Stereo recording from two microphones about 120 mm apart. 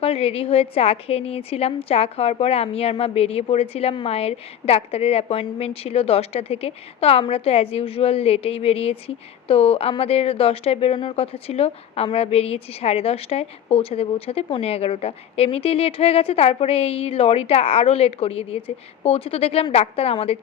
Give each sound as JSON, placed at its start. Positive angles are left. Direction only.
{"t": 0.0, "sound": "a woman's voice", "side_deg": 55}